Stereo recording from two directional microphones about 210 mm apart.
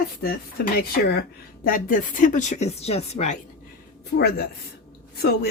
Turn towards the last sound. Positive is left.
turn(degrees=50)  # may be behind; listen again after turning